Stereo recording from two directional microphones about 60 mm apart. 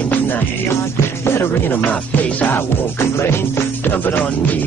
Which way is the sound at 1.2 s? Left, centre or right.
Left.